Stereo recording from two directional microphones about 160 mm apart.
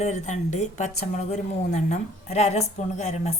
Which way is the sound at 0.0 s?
50° left (ahead or behind).